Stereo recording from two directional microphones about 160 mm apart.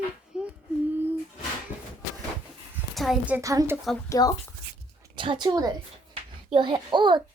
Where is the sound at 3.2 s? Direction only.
15° right (ahead or behind).